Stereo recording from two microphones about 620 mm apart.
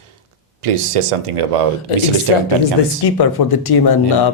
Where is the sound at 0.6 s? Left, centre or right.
Right.